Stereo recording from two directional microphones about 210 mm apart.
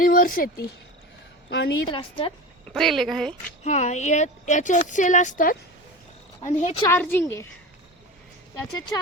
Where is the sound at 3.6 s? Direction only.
35° left (ahead or behind).